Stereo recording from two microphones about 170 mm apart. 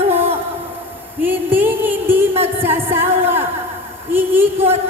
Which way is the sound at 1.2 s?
10° right (ahead or behind).